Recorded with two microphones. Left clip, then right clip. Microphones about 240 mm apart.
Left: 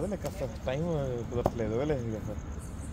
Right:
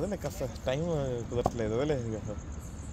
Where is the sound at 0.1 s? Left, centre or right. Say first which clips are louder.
Even; right.